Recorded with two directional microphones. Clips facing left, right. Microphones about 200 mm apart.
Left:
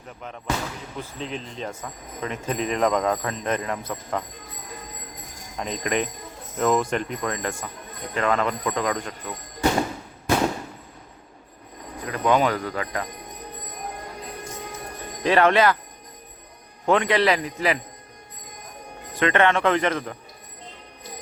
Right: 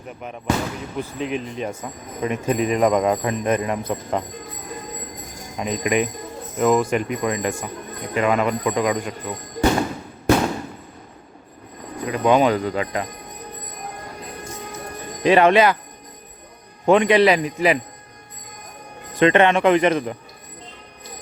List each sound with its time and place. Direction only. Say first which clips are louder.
0.1 s speech: right 5 dB; 15° right (ahead or behind)
5.5 s speech: right 5 dB; 10° right (ahead or behind)
12.0 s speech: right 4 dB; 20° right (ahead or behind)
15.2 s speech: right 4 dB; 15° right (ahead or behind)
16.8 s speech: right 5 dB; 15° right (ahead or behind)
19.2 s speech: right 5 dB; 20° right (ahead or behind)